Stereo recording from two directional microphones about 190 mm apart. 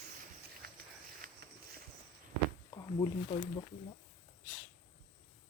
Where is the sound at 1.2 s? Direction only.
50° right (ahead or behind).